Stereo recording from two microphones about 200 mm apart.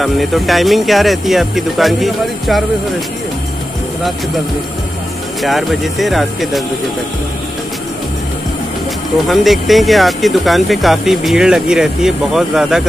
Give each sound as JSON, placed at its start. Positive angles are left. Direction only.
{"t": 0.0, "sound": "speech", "side_deg": 0}
{"t": 5.4, "sound": "speech", "side_deg": 0}
{"t": 9.3, "sound": "speech", "side_deg": 0}